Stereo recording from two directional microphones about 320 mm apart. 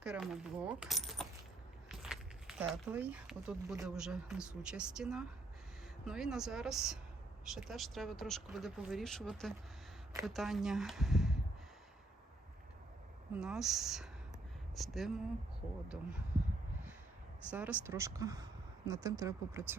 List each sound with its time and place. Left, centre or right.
0.0 s coin: centre
1.9 s speech: centre
13.3 s speech: centre
17.5 s speech: centre